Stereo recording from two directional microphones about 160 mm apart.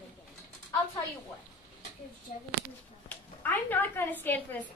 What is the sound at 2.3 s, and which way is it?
Speech, 55° left (ahead or behind).